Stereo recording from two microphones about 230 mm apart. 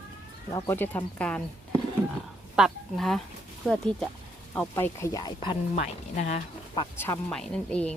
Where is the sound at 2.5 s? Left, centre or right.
Centre; by 6.9 s left.